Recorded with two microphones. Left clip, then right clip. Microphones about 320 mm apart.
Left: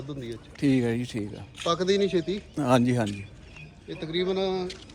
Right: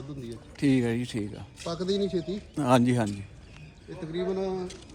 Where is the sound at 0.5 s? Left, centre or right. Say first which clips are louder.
Left 1 dB; centre.